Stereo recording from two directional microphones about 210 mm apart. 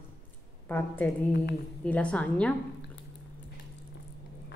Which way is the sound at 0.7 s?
10° left (ahead or behind).